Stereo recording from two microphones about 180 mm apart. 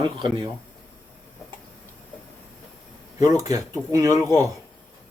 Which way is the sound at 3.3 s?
20° right (ahead or behind).